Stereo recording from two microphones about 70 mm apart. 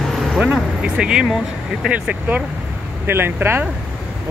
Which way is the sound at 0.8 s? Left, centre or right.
Centre.